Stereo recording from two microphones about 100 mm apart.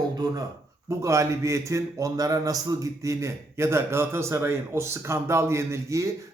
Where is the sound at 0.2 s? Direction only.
40° right (ahead or behind).